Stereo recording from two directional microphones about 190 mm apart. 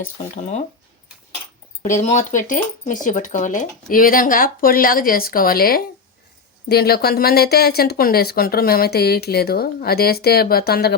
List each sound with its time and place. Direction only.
0.0 s speech: 40° left (ahead or behind)
1.8 s speech: 40° left (ahead or behind)